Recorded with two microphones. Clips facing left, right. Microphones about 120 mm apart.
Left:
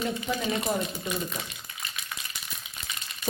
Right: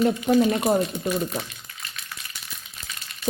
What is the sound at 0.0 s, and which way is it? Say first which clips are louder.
Speech: right 10 dB; 55° right (ahead or behind).